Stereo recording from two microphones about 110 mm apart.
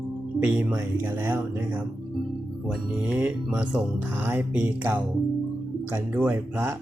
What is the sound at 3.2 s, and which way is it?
Speech, 15° right (ahead or behind).